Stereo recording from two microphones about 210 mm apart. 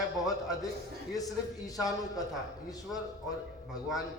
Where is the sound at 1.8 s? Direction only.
15° left (ahead or behind).